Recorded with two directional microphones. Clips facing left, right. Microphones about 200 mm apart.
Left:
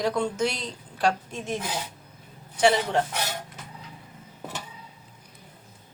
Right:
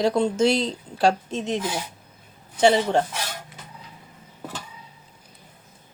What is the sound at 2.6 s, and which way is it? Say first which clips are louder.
Speech: right 3 dB; 25° right (ahead or behind).